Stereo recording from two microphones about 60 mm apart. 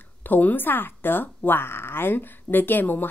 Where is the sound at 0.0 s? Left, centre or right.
Left.